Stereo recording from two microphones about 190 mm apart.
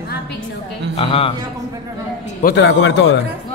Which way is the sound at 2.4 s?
65° left (ahead or behind).